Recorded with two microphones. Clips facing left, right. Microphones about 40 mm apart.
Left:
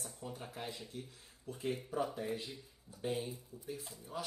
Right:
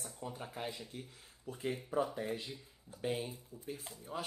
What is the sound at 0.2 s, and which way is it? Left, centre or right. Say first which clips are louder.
Speech: right 3 dB; centre.